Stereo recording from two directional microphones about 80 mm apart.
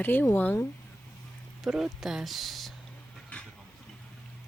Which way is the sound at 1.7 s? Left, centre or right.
Centre.